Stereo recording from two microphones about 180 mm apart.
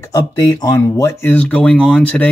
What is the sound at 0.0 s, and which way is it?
Speech, 20° left (ahead or behind).